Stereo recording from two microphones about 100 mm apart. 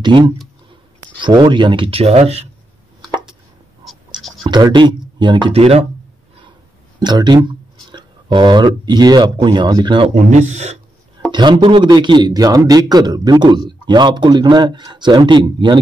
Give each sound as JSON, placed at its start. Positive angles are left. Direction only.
{"t": 1.2, "sound": "speech", "side_deg": -50}
{"t": 3.8, "sound": "scratch", "side_deg": 0}
{"t": 4.4, "sound": "scratch", "side_deg": -45}
{"t": 4.7, "sound": "speech", "side_deg": -50}
{"t": 5.5, "sound": "speech", "side_deg": -90}
{"t": 7.0, "sound": "speech", "side_deg": -45}
{"t": 10.0, "sound": "speech", "side_deg": -90}
{"t": 11.3, "sound": "a man's voice", "side_deg": -50}